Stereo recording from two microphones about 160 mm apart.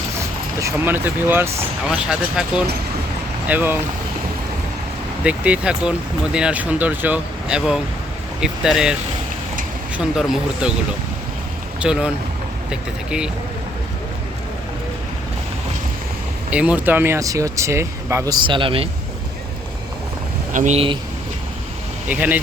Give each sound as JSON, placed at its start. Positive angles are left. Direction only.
{"t": 0.6, "sound": "speech", "side_deg": -15}
{"t": 5.2, "sound": "speech", "side_deg": -10}
{"t": 10.0, "sound": "speech", "side_deg": -5}
{"t": 11.8, "sound": "speech", "side_deg": -5}
{"t": 16.5, "sound": "speech", "side_deg": -10}
{"t": 18.4, "sound": "a man's voice", "side_deg": -30}
{"t": 20.5, "sound": "speech", "side_deg": -55}
{"t": 20.7, "sound": "a man's voice", "side_deg": -35}
{"t": 22.1, "sound": "speech", "side_deg": -10}